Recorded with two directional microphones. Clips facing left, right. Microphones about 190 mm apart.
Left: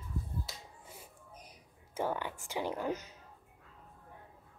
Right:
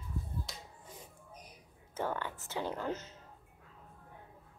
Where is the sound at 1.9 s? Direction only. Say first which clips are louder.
Left 2 dB; 15° left (ahead or behind).